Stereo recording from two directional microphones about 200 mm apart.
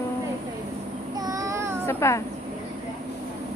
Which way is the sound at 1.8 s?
15° left (ahead or behind).